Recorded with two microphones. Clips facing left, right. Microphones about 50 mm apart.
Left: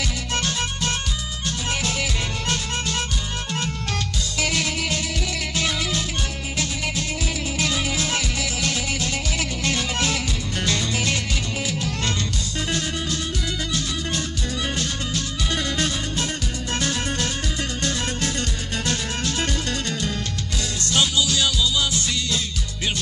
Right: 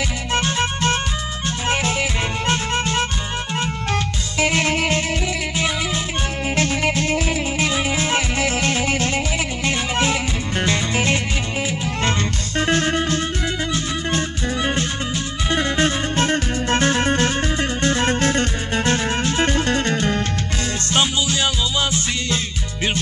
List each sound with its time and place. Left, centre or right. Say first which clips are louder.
0.3 s music: right 7 dB; right
5.6 s music: right 1 dB; right
6.5 s music: right 8 dB; right
7.6 s music: right 3 dB; right
9.7 s music: right 4 dB; right
13.7 s music: right 4 dB; right